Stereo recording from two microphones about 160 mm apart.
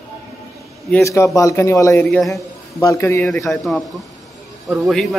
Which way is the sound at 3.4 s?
Centre (ahead or behind).